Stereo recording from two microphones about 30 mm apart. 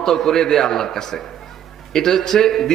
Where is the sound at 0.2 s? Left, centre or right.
Centre.